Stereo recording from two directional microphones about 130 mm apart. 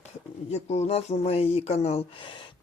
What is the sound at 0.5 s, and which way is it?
Speech, 55° left (ahead or behind).